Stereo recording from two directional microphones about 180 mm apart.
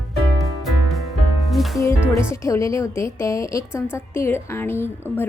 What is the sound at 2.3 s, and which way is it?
A woman's voice, 15° left (ahead or behind).